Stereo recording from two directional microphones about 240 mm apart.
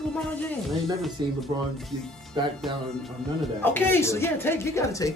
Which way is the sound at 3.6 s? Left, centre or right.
Centre.